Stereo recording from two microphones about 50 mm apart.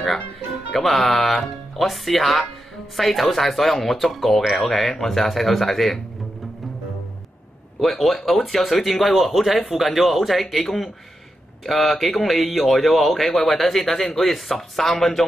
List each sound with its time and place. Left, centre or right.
0.7 s speech: centre
7.8 s speech: centre